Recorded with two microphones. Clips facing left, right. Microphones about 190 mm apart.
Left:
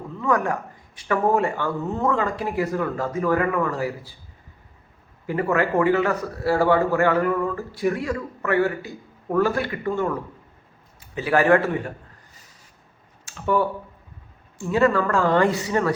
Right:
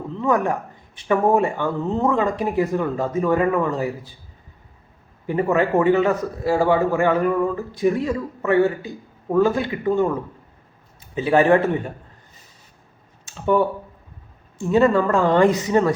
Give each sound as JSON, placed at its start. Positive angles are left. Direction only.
{"t": 0.2, "sound": "speech", "side_deg": -20}
{"t": 5.2, "sound": "a man's voice", "side_deg": -20}
{"t": 13.2, "sound": "a sound", "side_deg": -20}
{"t": 14.6, "sound": "speech", "side_deg": -20}